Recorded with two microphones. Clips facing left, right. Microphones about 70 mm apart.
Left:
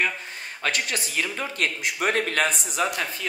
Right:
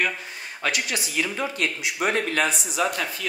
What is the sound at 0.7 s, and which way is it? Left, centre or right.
Speech, left.